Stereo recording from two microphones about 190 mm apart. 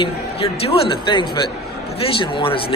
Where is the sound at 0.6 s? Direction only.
30° left (ahead or behind).